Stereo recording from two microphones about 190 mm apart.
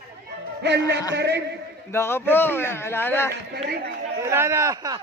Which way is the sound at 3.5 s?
55° right (ahead or behind).